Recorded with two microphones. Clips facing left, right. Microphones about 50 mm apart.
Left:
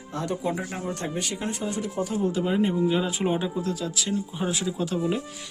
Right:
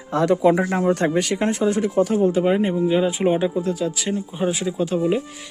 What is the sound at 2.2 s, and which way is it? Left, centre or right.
Speech, right.